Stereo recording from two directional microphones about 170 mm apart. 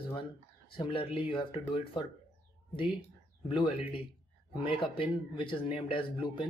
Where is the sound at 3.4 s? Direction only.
30° left (ahead or behind).